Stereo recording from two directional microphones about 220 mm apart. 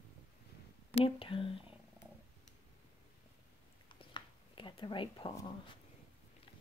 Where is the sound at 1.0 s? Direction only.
25° left (ahead or behind).